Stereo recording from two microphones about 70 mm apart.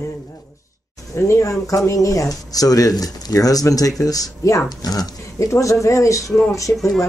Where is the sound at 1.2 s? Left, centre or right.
Left.